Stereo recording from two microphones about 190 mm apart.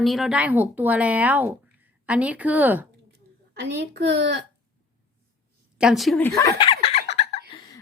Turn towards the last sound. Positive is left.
turn(degrees=30)  # may be behind; listen again after turning